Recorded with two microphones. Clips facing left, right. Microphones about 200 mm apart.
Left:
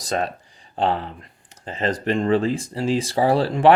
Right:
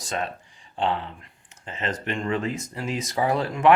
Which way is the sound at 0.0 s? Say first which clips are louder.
Left 5 dB; 35° left (ahead or behind).